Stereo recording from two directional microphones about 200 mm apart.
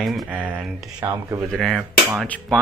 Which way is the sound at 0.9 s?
15° right (ahead or behind).